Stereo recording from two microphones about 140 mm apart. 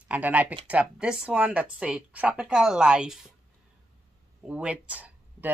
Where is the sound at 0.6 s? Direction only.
10° right (ahead or behind).